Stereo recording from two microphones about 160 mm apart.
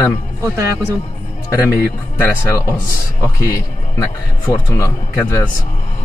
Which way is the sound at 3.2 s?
20° left (ahead or behind).